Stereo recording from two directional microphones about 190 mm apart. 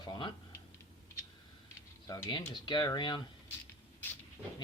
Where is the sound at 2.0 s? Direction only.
20° left (ahead or behind).